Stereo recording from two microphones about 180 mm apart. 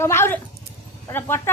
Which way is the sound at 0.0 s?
15° left (ahead or behind).